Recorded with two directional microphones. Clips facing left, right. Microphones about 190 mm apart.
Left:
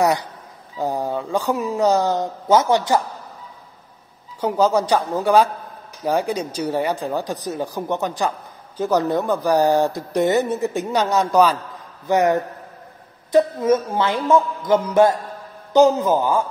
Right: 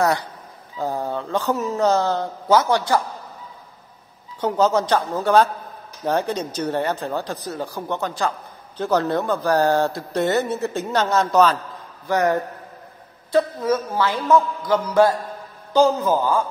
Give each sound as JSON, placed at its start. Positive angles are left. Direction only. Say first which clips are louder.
{"t": 0.0, "sound": "speech", "louder": "left 2 dB", "side_deg": 15}
{"t": 4.4, "sound": "a man's voice", "louder": "left 1 dB", "side_deg": 10}